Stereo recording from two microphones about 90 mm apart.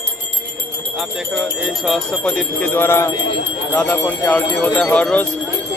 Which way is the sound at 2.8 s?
30° left (ahead or behind).